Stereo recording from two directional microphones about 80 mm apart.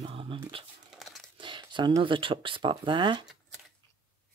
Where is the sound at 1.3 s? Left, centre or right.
Right.